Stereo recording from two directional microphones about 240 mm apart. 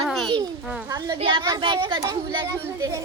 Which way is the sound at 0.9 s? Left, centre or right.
Centre.